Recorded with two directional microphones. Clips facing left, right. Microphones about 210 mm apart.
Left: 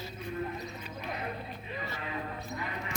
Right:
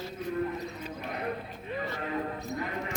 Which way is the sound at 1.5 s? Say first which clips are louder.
Right 4 dB; 50° right (ahead or behind).